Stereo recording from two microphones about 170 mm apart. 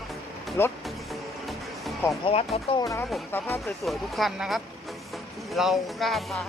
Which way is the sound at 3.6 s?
Centre (ahead or behind).